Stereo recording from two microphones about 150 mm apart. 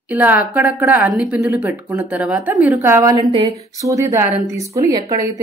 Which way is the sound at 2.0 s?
10° right (ahead or behind).